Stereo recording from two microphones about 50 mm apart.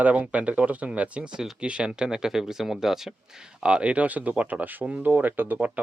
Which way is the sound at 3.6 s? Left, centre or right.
Right.